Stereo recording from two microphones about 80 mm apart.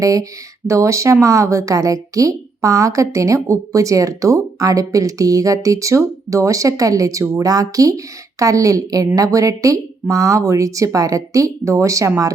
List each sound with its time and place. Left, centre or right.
0.0 s speech: right